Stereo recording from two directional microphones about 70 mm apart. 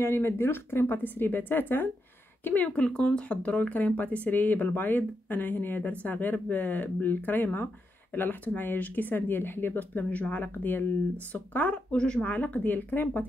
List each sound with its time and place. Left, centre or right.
0.0 s speech: left
2.8 s speech: centre; by 13.2 s left